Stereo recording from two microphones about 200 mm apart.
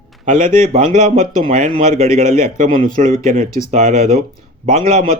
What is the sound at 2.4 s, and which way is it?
Speech, 40° right (ahead or behind).